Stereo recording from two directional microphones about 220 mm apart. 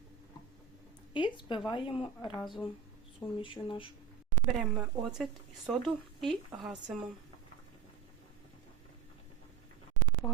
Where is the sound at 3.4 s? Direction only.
20° left (ahead or behind).